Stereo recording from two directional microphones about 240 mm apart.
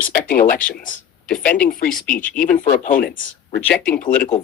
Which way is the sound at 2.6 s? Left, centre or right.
Left.